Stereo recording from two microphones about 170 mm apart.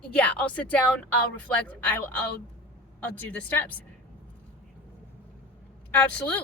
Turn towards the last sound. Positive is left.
turn(degrees=10)  # may be behind; listen again after turning